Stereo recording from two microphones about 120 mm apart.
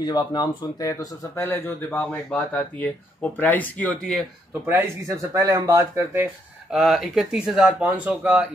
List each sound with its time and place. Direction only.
0.0 s speech: 35° left (ahead or behind); by 4.1 s 10° left (ahead or behind)
4.6 s speech: 20° right (ahead or behind)
6.7 s speech: 5° right (ahead or behind)